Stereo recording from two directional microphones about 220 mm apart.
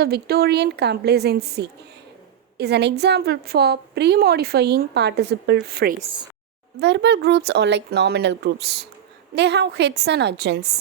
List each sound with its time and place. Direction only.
0.0 s a woman's voice: 45° right (ahead or behind)